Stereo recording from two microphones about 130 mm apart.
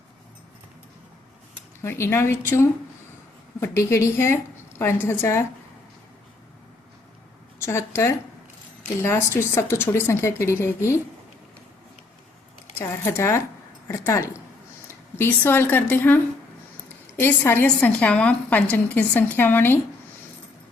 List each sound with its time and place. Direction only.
1.8 s speech: 20° left (ahead or behind)
7.6 s speech: 20° left (ahead or behind)
12.8 s a woman's voice: 20° left (ahead or behind)